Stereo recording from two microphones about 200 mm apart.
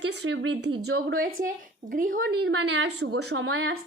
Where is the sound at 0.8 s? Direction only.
50° right (ahead or behind); by 3.5 s 90° right.